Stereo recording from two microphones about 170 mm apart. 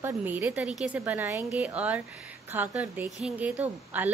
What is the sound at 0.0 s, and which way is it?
A woman's voice, 10° right (ahead or behind).